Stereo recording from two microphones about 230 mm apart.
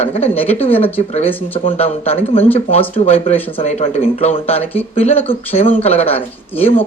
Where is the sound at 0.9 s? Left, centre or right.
Left.